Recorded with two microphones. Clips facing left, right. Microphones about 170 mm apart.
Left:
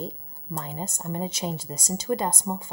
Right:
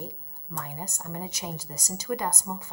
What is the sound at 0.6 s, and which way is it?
A woman's voice, 25° left (ahead or behind).